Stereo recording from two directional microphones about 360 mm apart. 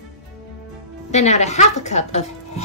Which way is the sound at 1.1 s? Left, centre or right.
Centre.